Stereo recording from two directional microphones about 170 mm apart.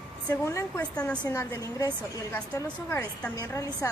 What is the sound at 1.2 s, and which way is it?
A woman's voice, 15° left (ahead or behind).